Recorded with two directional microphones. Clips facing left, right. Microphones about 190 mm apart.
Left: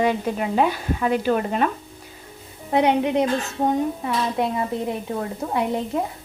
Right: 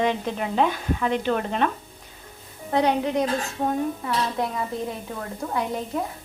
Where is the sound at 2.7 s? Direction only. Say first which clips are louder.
Left 3 dB; 20° left (ahead or behind).